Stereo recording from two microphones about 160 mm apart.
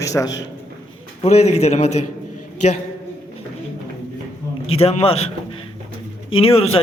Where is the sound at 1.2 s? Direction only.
45° left (ahead or behind).